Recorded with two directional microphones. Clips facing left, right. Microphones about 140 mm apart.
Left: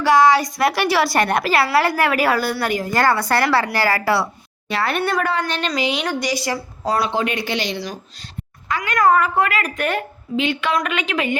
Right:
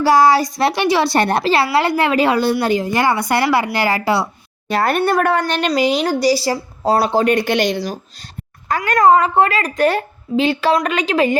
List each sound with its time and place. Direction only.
0.0 s a woman's voice: 35° right (ahead or behind)
4.7 s speech: 45° right (ahead or behind)
9.0 s speech: 25° right (ahead or behind)